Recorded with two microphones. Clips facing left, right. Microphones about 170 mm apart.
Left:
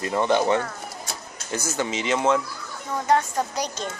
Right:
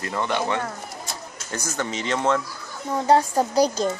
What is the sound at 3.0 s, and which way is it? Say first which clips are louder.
Speech: right 3 dB; 30° right (ahead or behind).